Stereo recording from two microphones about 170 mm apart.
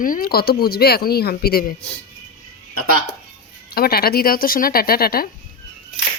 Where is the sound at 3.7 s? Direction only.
65° left (ahead or behind).